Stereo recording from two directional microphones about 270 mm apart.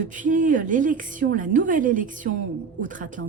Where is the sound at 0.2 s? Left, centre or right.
Right.